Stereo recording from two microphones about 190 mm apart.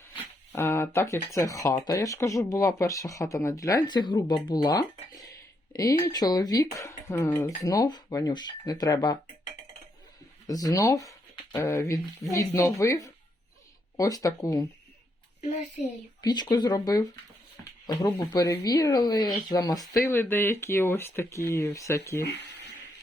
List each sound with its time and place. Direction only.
0.5 s speech: 15° left (ahead or behind)
10.4 s speech: 20° left (ahead or behind)
15.4 s a child's voice: 35° left (ahead or behind)
16.2 s speech: 20° left (ahead or behind)